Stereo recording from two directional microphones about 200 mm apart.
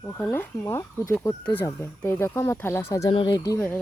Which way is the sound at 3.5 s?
10° left (ahead or behind).